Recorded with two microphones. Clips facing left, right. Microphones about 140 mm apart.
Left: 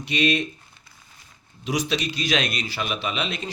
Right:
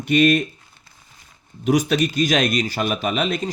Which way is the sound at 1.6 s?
50° right (ahead or behind).